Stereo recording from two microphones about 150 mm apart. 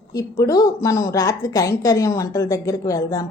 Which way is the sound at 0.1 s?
25° left (ahead or behind).